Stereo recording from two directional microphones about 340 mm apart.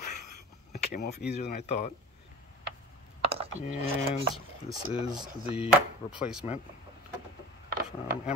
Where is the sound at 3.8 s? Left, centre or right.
Centre.